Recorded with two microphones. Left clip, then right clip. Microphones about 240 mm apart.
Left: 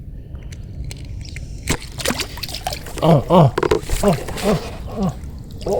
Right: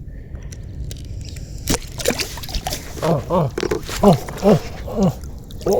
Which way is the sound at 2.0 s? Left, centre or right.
Left.